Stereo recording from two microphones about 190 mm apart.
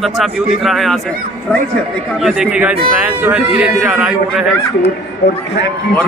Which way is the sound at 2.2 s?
5° right (ahead or behind).